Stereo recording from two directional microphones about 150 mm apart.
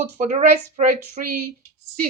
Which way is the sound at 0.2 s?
55° right (ahead or behind).